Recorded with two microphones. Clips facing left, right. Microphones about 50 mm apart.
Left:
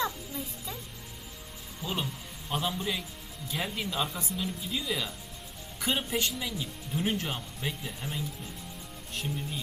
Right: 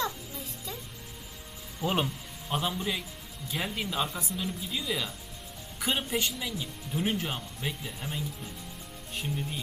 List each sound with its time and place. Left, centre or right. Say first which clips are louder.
0.0 s a sound: left 1 dB; centre
1.8 s speech: right 5 dB; right
2.5 s a man's voice: right 1 dB; centre